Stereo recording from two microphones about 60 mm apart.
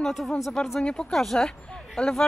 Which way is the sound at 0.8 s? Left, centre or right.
Centre.